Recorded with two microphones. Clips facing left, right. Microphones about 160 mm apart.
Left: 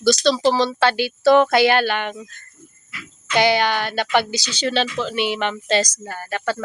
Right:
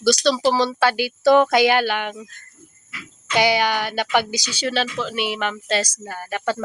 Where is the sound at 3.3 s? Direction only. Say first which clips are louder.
Left 1 dB; 10° right (ahead or behind).